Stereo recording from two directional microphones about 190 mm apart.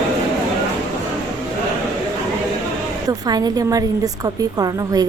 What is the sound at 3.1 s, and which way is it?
A woman's voice, 20° right (ahead or behind).